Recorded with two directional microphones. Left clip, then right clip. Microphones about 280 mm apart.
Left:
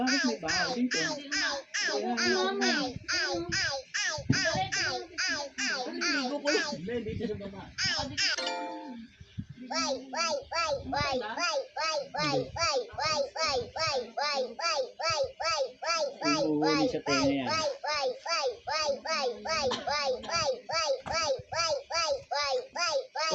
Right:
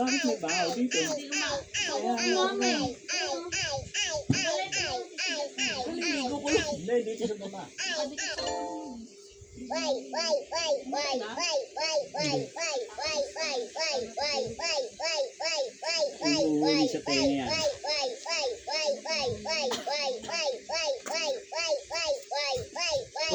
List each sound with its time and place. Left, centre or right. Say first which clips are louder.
0.0 s babbling: right 1 dB; left
7.8 s a child's voice: left 2 dB; left
9.6 s a child's voice: even; left
10.7 s a child's voice: right 1 dB; left
11.3 s a child's voice: right 1 dB; left